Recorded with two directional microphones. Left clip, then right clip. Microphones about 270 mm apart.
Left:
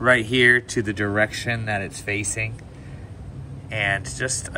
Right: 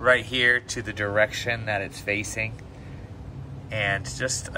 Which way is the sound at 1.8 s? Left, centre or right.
Centre.